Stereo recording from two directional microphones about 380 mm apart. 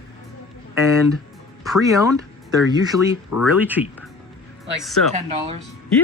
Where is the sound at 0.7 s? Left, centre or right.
Centre.